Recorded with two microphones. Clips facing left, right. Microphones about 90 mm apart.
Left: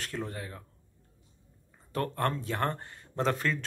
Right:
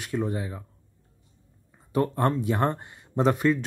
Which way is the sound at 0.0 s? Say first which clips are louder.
Right 8 dB; 15° right (ahead or behind).